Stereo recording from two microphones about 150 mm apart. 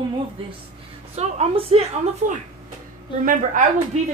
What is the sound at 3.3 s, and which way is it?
Speech, 60° right (ahead or behind).